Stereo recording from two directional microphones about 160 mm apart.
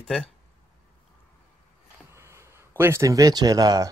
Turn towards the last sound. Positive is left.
turn(degrees=-25)  # may be behind; listen again after turning